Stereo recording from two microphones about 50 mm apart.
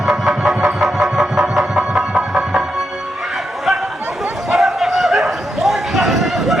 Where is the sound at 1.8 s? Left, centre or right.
Centre.